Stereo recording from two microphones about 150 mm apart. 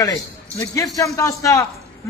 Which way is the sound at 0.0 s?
20° left (ahead or behind).